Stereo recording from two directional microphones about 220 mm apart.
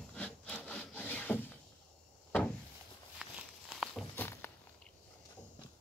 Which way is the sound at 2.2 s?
5° left (ahead or behind).